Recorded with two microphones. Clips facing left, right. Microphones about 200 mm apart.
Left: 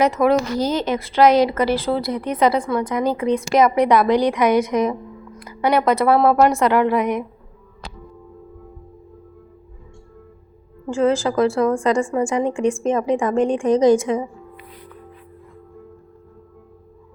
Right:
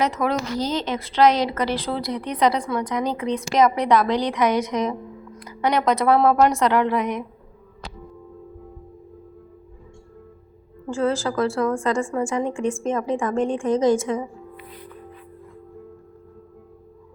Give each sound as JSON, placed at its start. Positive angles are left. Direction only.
{"t": 0.0, "sound": "a woman's voice", "side_deg": 10}
{"t": 10.8, "sound": "a woman's voice", "side_deg": 20}